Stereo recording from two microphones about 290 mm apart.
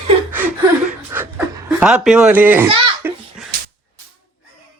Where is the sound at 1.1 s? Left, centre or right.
Centre.